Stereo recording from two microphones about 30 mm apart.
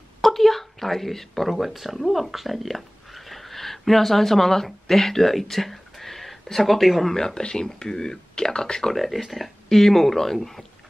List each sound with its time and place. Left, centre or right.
0.2 s a sound: centre
1.5 s speech: centre
7.2 s speech: left
8.9 s speech: centre
9.7 s speech: centre